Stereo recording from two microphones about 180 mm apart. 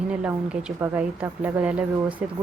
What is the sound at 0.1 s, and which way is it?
Speech, 5° right (ahead or behind).